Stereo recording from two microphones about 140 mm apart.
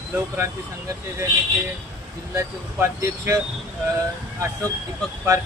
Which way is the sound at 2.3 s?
20° right (ahead or behind).